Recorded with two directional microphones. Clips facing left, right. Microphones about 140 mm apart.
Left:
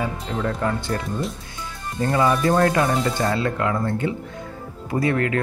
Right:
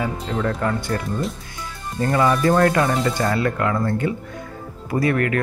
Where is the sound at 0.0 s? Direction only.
20° left (ahead or behind).